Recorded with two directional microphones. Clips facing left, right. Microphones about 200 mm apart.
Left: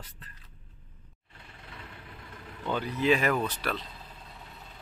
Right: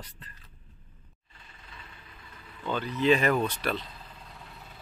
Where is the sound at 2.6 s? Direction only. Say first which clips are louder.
Right 1 dB; 10° left (ahead or behind).